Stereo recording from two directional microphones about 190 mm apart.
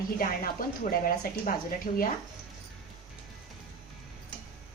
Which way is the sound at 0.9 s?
50° left (ahead or behind).